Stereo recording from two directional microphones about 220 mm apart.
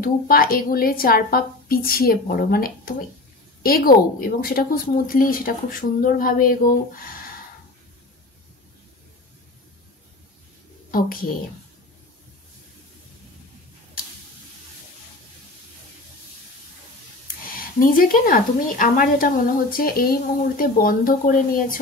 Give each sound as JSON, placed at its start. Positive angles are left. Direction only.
{"t": 0.0, "sound": "speech", "side_deg": 40}
{"t": 10.9, "sound": "a woman's voice", "side_deg": 40}
{"t": 17.5, "sound": "speech", "side_deg": 40}